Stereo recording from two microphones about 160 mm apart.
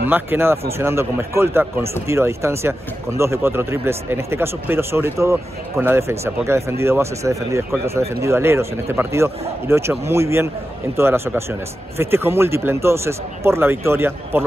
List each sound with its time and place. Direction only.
0.0 s speech: 15° right (ahead or behind)